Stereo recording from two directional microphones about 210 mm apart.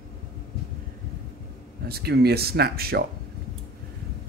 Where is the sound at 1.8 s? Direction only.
50° right (ahead or behind).